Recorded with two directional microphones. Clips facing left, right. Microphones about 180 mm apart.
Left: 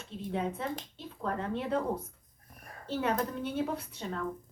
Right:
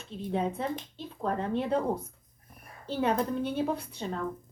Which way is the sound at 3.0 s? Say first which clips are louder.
Right 4 dB; 30° right (ahead or behind).